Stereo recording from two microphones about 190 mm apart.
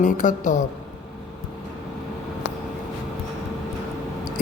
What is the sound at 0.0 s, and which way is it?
Speech, 40° left (ahead or behind).